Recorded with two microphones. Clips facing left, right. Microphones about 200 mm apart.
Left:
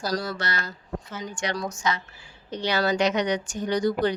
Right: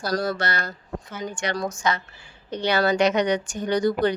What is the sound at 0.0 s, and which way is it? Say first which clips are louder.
Speech: right 3 dB; 55° right (ahead or behind).